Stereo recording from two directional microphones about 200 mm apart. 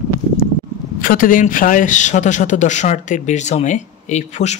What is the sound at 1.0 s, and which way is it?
A man's voice, 45° left (ahead or behind).